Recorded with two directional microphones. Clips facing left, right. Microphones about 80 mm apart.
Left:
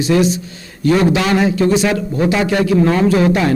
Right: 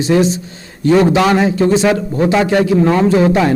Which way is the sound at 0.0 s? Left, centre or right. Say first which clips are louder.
Right 1 dB; right.